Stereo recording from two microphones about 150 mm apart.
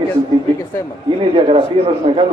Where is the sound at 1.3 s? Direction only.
40° right (ahead or behind).